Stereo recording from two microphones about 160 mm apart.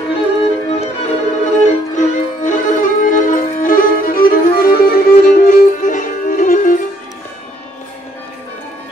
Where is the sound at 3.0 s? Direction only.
55° left (ahead or behind).